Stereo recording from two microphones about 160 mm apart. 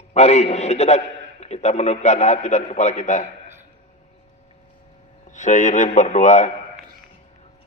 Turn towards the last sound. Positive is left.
turn(degrees=50)  # may be behind; listen again after turning